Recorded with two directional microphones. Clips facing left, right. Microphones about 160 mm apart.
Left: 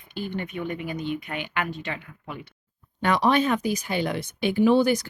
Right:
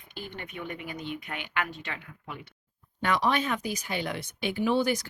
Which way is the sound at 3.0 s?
35° left (ahead or behind).